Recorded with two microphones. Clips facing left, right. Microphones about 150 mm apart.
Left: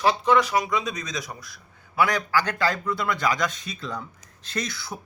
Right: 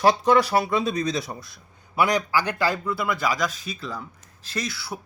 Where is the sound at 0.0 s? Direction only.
40° right (ahead or behind).